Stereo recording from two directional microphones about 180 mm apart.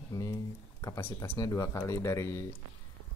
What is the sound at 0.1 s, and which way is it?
Speech, 20° left (ahead or behind).